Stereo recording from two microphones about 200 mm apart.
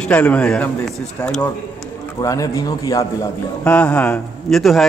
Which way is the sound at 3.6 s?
5° left (ahead or behind).